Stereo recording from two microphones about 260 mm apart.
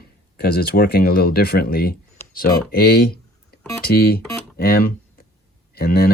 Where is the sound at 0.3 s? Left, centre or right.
Left.